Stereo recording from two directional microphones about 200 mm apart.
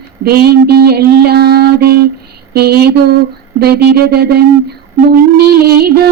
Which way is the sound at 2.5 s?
50° right (ahead or behind).